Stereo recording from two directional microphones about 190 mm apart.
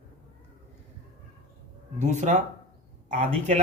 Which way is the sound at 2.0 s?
40° right (ahead or behind).